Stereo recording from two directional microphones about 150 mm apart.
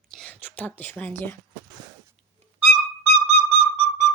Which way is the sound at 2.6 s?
45° right (ahead or behind).